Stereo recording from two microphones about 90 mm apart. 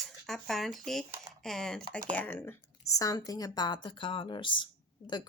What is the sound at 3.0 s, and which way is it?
A woman's voice, 40° left (ahead or behind).